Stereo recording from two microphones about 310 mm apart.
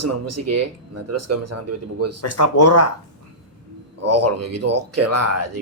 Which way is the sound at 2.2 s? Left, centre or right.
Left.